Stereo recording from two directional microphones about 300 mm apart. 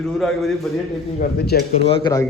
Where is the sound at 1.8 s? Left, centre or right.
Centre.